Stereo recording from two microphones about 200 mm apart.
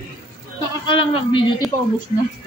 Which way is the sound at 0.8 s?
25° left (ahead or behind).